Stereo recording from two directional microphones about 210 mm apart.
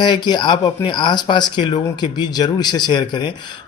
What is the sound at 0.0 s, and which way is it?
Speech, 20° left (ahead or behind).